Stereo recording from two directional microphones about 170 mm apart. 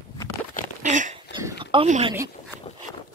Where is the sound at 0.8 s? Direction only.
45° right (ahead or behind).